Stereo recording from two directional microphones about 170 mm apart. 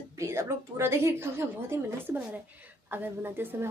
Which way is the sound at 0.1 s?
15° right (ahead or behind).